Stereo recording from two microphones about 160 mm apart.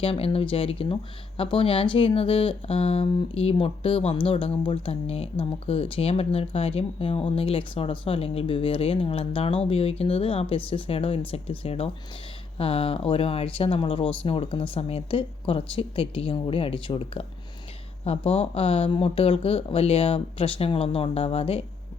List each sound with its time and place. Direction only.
0.0 s speech: 35° left (ahead or behind)